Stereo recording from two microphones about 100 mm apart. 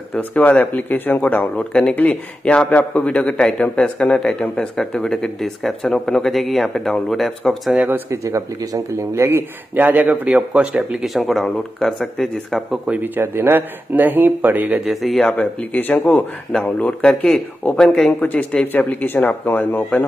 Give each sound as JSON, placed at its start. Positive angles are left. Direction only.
{"t": 0.1, "sound": "a man's voice", "side_deg": 15}
{"t": 7.7, "sound": "speech", "side_deg": -15}
{"t": 8.1, "sound": "speech", "side_deg": -30}
{"t": 12.8, "sound": "speech", "side_deg": -15}
{"t": 14.9, "sound": "speech", "side_deg": 0}
{"t": 15.7, "sound": "a man's voice", "side_deg": 15}